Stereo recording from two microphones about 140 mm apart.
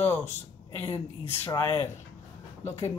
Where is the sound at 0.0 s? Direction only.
15° left (ahead or behind).